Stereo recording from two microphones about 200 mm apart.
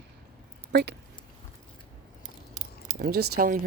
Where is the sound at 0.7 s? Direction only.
60° right (ahead or behind).